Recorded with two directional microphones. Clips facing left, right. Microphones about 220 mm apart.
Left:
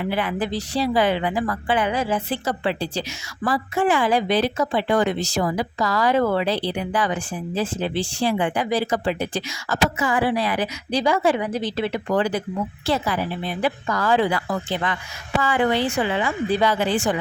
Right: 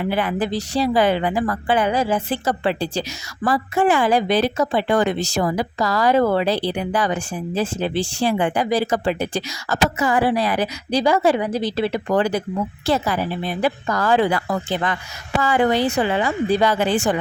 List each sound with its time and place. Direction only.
0.0 s a woman's voice: 45° right (ahead or behind)